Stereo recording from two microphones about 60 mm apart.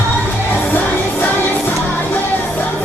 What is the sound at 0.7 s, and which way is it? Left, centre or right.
Music, left.